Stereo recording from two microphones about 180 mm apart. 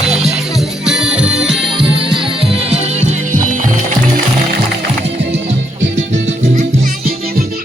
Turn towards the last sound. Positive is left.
turn(degrees=-40)  # may be behind; listen again after turning